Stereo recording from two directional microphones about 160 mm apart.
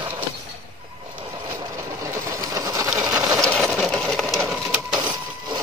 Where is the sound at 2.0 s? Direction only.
20° right (ahead or behind).